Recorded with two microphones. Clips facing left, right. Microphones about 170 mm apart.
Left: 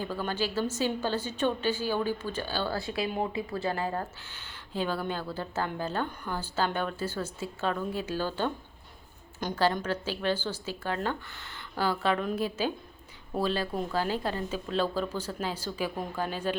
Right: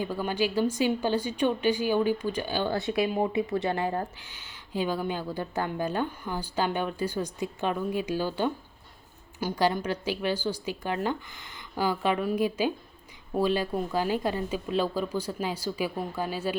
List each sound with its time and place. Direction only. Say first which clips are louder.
0.0 s speech: right 3 dB; 15° right (ahead or behind)
4.2 s speech: left 1 dB; 10° right (ahead or behind)